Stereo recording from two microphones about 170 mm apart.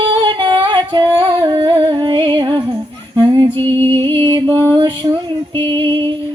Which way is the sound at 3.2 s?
25° right (ahead or behind).